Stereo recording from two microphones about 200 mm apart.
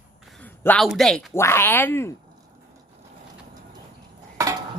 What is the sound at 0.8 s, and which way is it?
Speech, centre (ahead or behind).